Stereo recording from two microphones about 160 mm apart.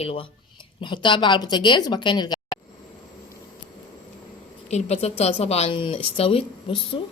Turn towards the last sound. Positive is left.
turn(degrees=35)  # may be behind; listen again after turning